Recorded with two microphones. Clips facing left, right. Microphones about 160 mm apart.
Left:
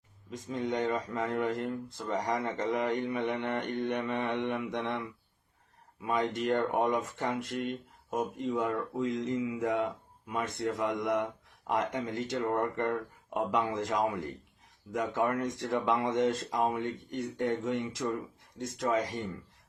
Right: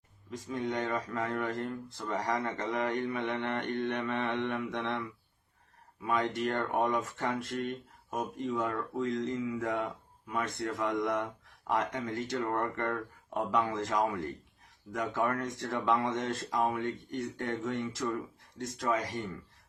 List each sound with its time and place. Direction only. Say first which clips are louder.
0.3 s speech: left 1 dB; 20° left (ahead or behind)
4.3 s mantra: left 1 dB; 15° left (ahead or behind)
6.1 s speech: left 1 dB; 20° left (ahead or behind)